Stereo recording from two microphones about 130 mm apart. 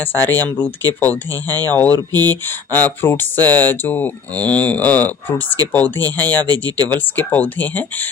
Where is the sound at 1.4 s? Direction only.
30° right (ahead or behind).